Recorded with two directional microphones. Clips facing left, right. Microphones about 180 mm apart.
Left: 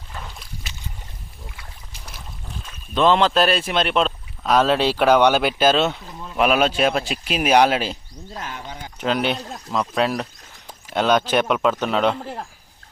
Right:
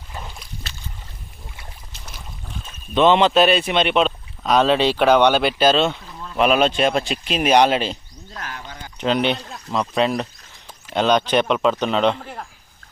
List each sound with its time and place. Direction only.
2.9 s speech: centre (ahead or behind)
8.3 s speech: 20° left (ahead or behind)
9.0 s speech: 5° left (ahead or behind)
12.2 s speech: 30° left (ahead or behind)